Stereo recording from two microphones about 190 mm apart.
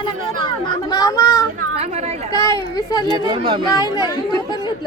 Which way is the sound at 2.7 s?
20° left (ahead or behind).